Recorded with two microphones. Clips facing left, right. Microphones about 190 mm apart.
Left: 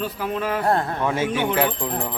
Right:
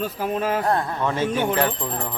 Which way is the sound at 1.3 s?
45° right (ahead or behind).